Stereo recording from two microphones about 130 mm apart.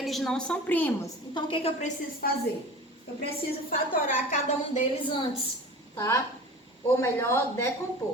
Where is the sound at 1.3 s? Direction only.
45° left (ahead or behind).